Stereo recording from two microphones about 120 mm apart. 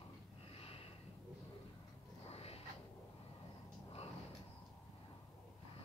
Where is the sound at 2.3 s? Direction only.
55° left (ahead or behind).